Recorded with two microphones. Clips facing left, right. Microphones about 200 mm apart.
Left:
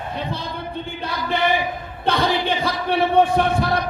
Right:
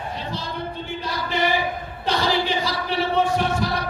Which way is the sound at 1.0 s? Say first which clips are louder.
Left 2 dB; 55° left (ahead or behind).